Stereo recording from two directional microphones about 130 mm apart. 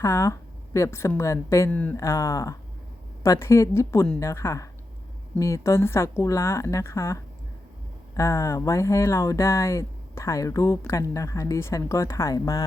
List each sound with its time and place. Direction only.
0.0 s a woman's voice: 20° left (ahead or behind)
1.7 s speech: 10° left (ahead or behind)
2.0 s speech: 25° left (ahead or behind)